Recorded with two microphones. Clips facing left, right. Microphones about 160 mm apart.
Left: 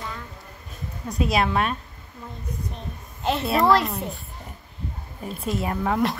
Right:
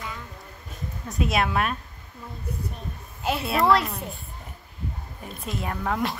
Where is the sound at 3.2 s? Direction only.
5° right (ahead or behind).